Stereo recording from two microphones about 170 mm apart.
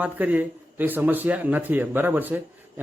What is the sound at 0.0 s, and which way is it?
A man's voice, 10° right (ahead or behind).